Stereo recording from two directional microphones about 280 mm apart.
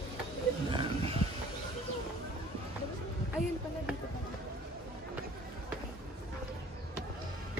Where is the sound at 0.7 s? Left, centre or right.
Centre.